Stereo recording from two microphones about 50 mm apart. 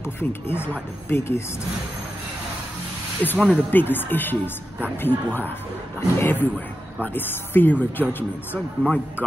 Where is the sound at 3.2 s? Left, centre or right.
Left.